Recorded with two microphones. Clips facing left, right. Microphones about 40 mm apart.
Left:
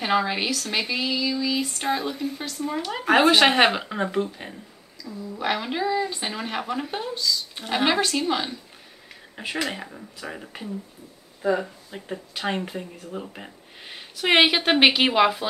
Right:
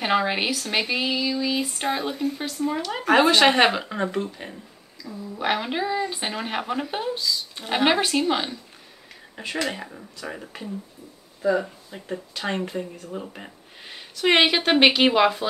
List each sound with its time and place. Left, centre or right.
0.0 s speech: centre
5.0 s speech: centre
9.3 s speech: centre
11.4 s speech: left
11.9 s speech: centre